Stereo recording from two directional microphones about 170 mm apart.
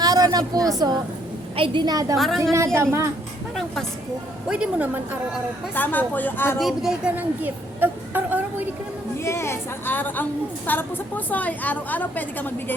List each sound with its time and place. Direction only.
0.0 s a woman's voice: 20° right (ahead or behind)
2.1 s a woman's voice: centre (ahead or behind)
2.4 s a woman's voice: 15° right (ahead or behind)
4.4 s a woman's voice: 5° right (ahead or behind)
5.7 s a woman's voice: 10° left (ahead or behind)
6.6 s a woman's voice: centre (ahead or behind)
9.1 s a woman's voice: 15° left (ahead or behind)